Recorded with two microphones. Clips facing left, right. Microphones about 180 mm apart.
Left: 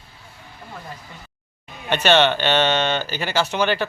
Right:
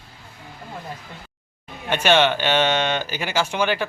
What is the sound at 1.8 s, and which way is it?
Speech, 10° right (ahead or behind).